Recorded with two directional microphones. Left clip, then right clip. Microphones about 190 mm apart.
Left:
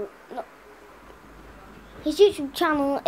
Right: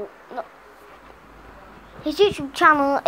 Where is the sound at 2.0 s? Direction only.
10° left (ahead or behind).